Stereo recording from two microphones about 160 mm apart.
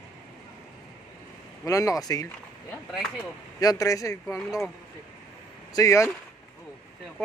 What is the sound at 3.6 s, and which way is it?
Speech, 20° left (ahead or behind).